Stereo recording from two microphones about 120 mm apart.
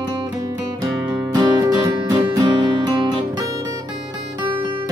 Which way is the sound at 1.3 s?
35° right (ahead or behind).